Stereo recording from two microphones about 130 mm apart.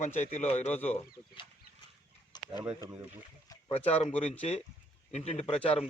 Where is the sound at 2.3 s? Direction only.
30° left (ahead or behind).